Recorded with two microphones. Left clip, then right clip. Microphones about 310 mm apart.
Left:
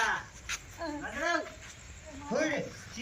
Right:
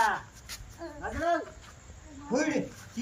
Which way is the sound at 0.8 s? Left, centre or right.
Left.